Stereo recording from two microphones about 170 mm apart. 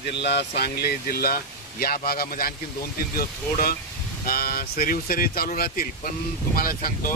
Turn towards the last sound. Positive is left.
turn(degrees=55)  # may be behind; listen again after turning